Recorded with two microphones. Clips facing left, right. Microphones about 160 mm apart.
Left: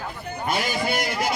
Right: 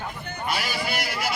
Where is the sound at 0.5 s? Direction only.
50° left (ahead or behind).